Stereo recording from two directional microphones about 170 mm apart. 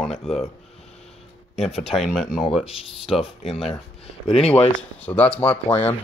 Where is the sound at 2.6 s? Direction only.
35° left (ahead or behind).